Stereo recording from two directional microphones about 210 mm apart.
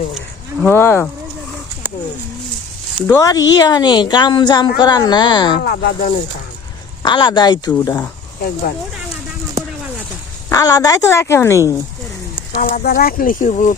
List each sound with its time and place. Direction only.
0.6 s a woman's voice: 10° left (ahead or behind)
3.1 s a woman's voice: 15° left (ahead or behind)
5.5 s speech: 45° left (ahead or behind)
7.0 s a woman's voice: 20° left (ahead or behind)
7.7 s a woman's voice: 10° left (ahead or behind)
10.5 s a woman's voice: 15° left (ahead or behind)
12.5 s speech: 40° left (ahead or behind)